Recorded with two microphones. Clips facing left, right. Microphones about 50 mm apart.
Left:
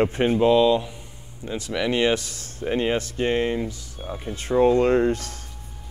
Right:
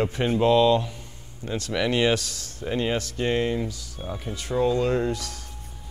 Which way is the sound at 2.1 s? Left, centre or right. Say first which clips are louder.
Left 1 dB; left.